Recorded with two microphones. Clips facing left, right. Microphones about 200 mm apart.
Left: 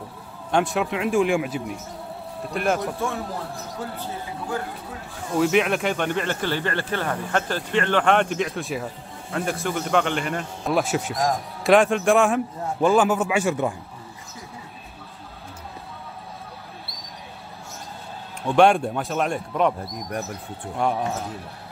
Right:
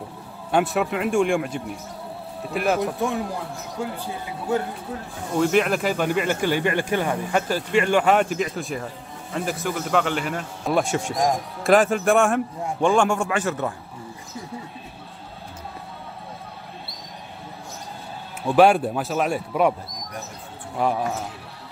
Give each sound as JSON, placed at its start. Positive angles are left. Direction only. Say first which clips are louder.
{"t": 0.5, "sound": "a man's voice", "louder": "right 1 dB", "side_deg": -5}
{"t": 2.8, "sound": "speech", "louder": "right 3 dB", "side_deg": -15}
{"t": 5.4, "sound": "a man's voice", "louder": "even", "side_deg": 0}
{"t": 18.4, "sound": "a man's voice", "louder": "right 1 dB", "side_deg": -5}
{"t": 20.7, "sound": "a man's voice", "louder": "right 1 dB", "side_deg": 0}